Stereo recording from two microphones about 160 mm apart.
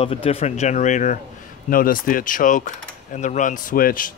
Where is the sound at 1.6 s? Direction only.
60° left (ahead or behind).